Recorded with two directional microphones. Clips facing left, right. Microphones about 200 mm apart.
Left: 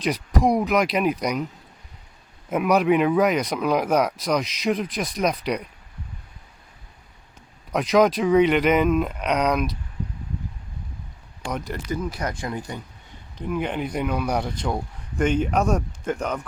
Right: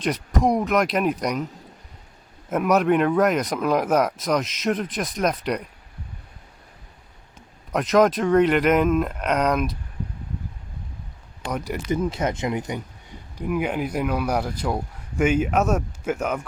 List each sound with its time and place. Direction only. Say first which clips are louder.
0.0 s speech: even; centre (ahead or behind)
2.5 s speech: even; centre (ahead or behind)
7.7 s speech: even; centre (ahead or behind)
11.9 s speech: right 5 dB; 25° right (ahead or behind); by 16.5 s 5° right (ahead or behind)